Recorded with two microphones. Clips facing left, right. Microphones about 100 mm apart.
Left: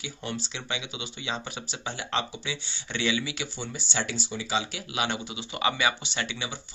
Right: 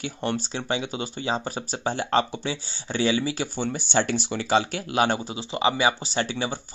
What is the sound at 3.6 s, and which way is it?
Speech, 55° right (ahead or behind).